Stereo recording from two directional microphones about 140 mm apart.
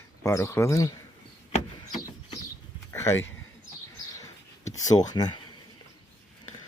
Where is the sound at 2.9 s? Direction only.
20° left (ahead or behind).